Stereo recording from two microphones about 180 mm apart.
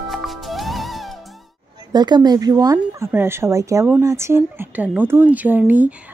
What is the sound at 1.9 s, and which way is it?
A woman's voice, 25° right (ahead or behind).